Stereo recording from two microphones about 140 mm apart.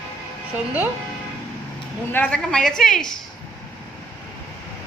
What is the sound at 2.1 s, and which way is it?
A woman's voice, 10° left (ahead or behind).